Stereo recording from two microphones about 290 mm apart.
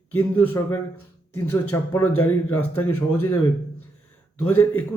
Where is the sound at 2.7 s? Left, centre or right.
Left.